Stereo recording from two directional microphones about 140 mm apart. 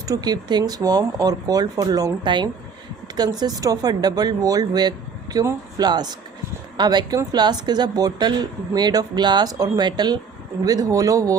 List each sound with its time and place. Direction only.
0.0 s speech: 25° right (ahead or behind)